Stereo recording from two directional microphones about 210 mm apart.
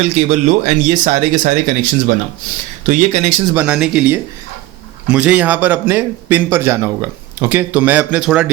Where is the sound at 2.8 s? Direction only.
35° right (ahead or behind).